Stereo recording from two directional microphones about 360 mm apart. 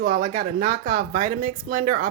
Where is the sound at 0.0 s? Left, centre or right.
Right.